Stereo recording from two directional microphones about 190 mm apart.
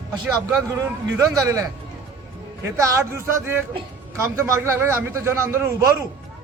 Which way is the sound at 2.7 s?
15° right (ahead or behind).